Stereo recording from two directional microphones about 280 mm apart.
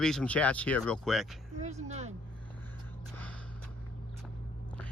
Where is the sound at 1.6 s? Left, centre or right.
Right.